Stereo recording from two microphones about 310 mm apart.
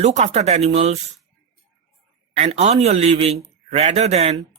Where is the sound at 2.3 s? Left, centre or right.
Right.